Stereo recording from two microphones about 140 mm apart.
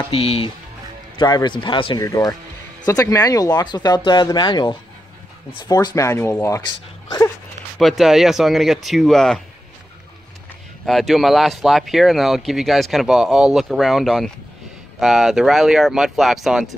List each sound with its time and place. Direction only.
0.1 s speech: 45° left (ahead or behind)
1.1 s speech: 30° left (ahead or behind)
2.0 s speech: 25° left (ahead or behind)
6.6 s speech: 30° left (ahead or behind)
7.8 s speech: 5° right (ahead or behind)
10.9 s speech: centre (ahead or behind)